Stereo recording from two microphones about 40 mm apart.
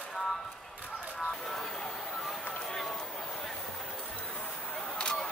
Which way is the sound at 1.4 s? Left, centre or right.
Centre.